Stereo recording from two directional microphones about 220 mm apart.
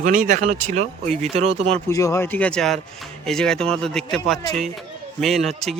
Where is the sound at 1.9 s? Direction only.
15° left (ahead or behind).